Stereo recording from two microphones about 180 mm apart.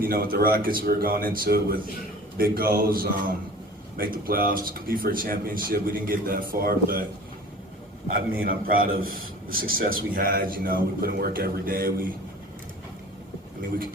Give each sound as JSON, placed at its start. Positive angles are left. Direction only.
{"t": 0.0, "sound": "a man's voice", "side_deg": -55}
{"t": 8.4, "sound": "a man's voice", "side_deg": -55}